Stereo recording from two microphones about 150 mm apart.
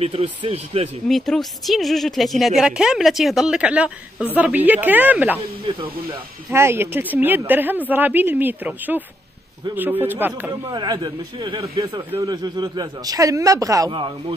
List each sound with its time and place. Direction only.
0.0 s speech: 40° right (ahead or behind)
1.0 s a woman's voice: centre (ahead or behind)
6.5 s speech: 15° right (ahead or behind)
10.7 s a man's voice: 30° right (ahead or behind)